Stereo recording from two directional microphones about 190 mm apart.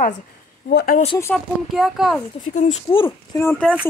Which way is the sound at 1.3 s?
Centre (ahead or behind).